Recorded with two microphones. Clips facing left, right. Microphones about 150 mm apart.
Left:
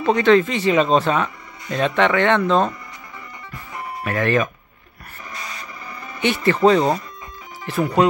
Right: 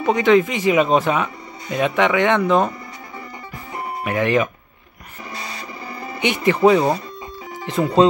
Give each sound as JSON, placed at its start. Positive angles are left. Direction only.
{"t": 0.0, "sound": "speech", "side_deg": -15}
{"t": 3.7, "sound": "music", "side_deg": -15}
{"t": 5.3, "sound": "printer", "side_deg": -30}
{"t": 6.2, "sound": "speech", "side_deg": -15}
{"t": 7.6, "sound": "speech", "side_deg": -20}